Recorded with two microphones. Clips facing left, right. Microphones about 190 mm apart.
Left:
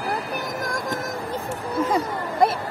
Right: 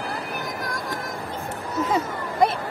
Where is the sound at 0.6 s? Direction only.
45° left (ahead or behind).